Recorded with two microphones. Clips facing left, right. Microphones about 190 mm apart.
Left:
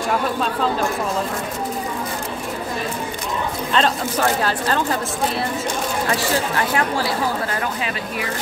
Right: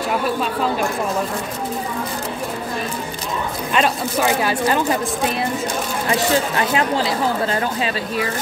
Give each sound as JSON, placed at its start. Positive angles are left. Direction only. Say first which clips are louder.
{"t": 3.7, "sound": "speech", "louder": "right 1 dB", "side_deg": -10}
{"t": 6.0, "sound": "speech", "louder": "right 5 dB", "side_deg": -20}